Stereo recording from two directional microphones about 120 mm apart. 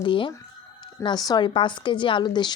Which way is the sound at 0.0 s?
45° left (ahead or behind).